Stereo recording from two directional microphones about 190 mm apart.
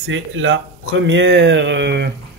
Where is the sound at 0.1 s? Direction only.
90° right.